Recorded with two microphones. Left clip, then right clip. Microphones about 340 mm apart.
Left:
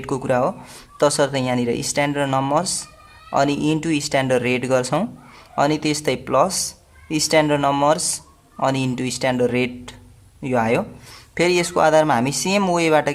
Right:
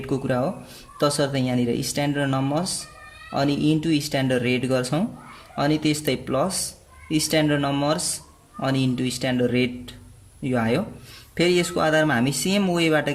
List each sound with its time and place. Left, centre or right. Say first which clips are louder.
0.0 s speech: left 5 dB; left